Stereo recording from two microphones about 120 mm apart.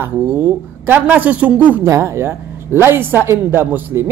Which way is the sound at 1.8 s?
25° right (ahead or behind).